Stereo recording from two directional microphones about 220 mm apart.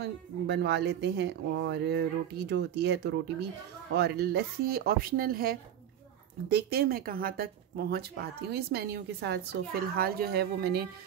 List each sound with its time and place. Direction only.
0.0 s speech: 50° right (ahead or behind)